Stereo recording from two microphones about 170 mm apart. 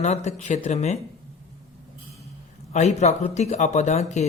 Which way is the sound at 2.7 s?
40° left (ahead or behind).